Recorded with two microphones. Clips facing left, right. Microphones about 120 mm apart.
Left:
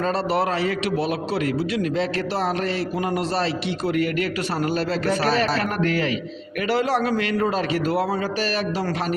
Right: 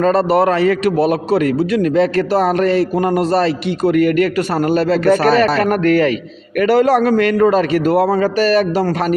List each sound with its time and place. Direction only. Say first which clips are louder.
0.0 s a man's voice: right 9 dB; 50° right (ahead or behind)